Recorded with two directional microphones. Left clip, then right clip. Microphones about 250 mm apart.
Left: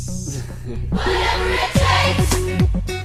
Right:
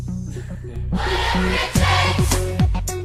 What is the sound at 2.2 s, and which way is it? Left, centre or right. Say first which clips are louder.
Music: left 2 dB; centre.